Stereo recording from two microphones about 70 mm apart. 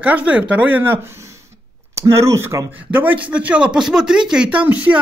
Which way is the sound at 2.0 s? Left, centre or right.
Right.